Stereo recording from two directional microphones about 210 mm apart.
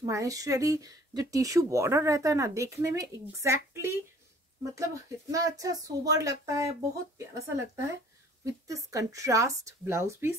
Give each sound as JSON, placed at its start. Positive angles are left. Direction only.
{"t": 0.0, "sound": "speech", "side_deg": -15}
{"t": 5.3, "sound": "speech", "side_deg": -15}